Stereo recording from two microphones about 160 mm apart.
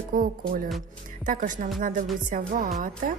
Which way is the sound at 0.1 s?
60° right (ahead or behind).